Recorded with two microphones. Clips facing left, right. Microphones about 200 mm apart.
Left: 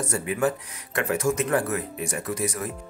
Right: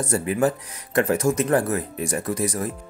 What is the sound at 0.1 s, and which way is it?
Speech, 35° right (ahead or behind).